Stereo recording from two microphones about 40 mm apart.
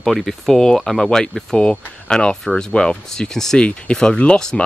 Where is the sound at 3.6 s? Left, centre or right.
Left.